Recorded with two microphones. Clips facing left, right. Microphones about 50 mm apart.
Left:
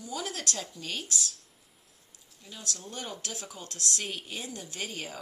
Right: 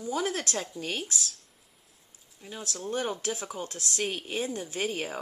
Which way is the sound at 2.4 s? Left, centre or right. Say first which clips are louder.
Right 3 dB; right.